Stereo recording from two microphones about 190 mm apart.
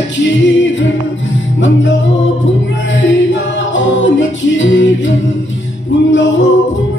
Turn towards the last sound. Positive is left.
turn(degrees=80)